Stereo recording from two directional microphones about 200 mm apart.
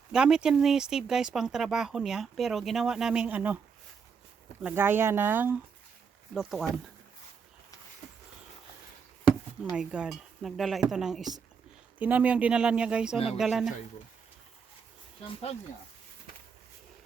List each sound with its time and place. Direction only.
0.1 s speech: 5° right (ahead or behind)
4.6 s speech: 10° right (ahead or behind)
9.7 s speech: 5° right (ahead or behind)
13.1 s speech: 30° left (ahead or behind)
13.4 s speech: centre (ahead or behind)